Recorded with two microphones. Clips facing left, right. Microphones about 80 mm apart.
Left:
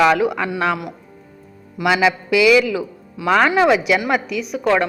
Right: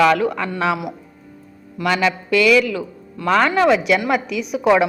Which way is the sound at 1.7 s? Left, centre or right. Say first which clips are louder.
Left 2 dB; centre.